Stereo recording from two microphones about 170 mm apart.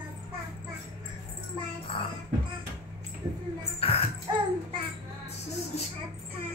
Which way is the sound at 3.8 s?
35° left (ahead or behind).